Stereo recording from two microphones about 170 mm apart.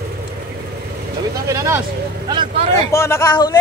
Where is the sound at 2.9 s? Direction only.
15° left (ahead or behind).